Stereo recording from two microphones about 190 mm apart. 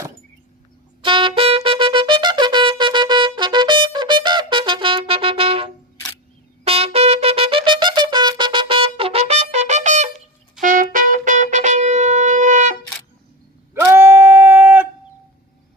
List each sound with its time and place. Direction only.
1.0 s trumpet: 25° right (ahead or behind)
6.7 s brass instrument: 30° right (ahead or behind)
10.6 s trumpet: 45° right (ahead or behind)
10.9 s shofar: 45° right (ahead or behind)
13.7 s a sound: 15° right (ahead or behind)